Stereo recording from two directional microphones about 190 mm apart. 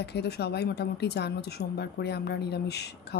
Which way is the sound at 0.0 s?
60° left (ahead or behind).